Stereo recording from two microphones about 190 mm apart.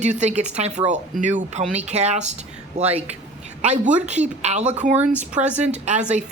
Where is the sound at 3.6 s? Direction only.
35° right (ahead or behind).